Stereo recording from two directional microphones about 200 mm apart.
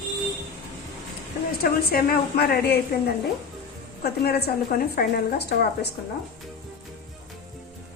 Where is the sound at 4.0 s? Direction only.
50° left (ahead or behind).